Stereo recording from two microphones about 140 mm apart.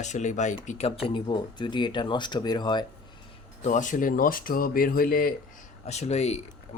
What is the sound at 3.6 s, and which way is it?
Speech, 60° left (ahead or behind).